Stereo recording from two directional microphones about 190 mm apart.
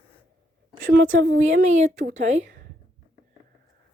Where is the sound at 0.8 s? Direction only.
45° right (ahead or behind).